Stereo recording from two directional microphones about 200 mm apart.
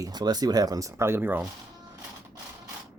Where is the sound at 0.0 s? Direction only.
20° right (ahead or behind).